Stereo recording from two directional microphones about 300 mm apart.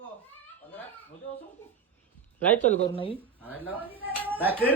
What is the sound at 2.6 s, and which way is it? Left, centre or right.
Speech, left.